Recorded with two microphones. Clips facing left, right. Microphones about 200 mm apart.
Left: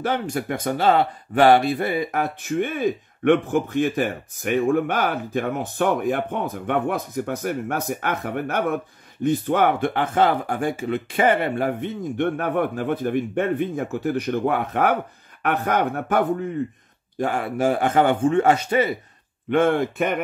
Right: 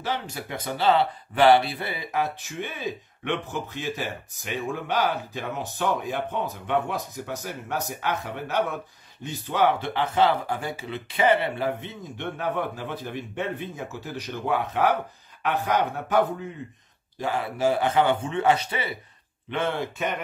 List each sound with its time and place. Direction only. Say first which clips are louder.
0.0 s speech: left 7 dB; 50° left (ahead or behind)